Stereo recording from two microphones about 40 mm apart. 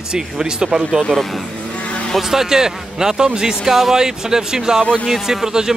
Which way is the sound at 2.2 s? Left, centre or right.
Centre.